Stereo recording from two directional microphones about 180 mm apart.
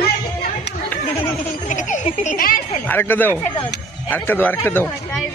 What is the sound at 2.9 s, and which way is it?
Speech, 10° left (ahead or behind).